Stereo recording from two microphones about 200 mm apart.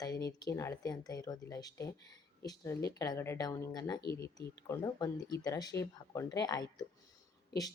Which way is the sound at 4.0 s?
55° left (ahead or behind).